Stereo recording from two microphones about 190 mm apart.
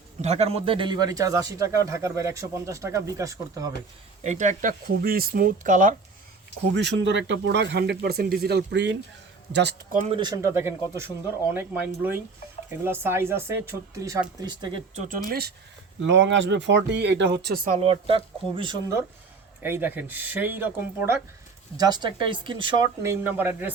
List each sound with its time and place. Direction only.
0.2 s a man's voice: 35° right (ahead or behind); by 3.7 s 15° right (ahead or behind)
4.2 s speech: 40° right (ahead or behind)
6.7 s speech: 70° right (ahead or behind)
10.1 s a man's voice: 25° right (ahead or behind)
15.3 s speech: 55° right (ahead or behind)
16.0 s speech: 70° right (ahead or behind)
17.7 s speech: 30° right (ahead or behind)
19.6 s a man's voice: 10° right (ahead or behind)
21.8 s speech: 20° right (ahead or behind)
23.2 s a man's voice: 10° right (ahead or behind)